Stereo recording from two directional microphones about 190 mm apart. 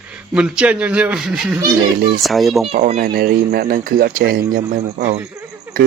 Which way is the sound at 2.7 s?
35° right (ahead or behind).